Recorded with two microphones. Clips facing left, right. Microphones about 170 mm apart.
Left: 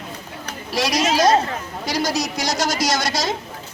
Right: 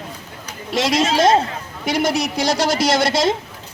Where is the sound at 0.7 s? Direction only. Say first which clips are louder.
Right 2 dB; 25° right (ahead or behind).